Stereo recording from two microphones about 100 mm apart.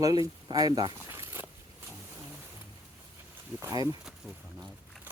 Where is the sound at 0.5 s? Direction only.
40° right (ahead or behind).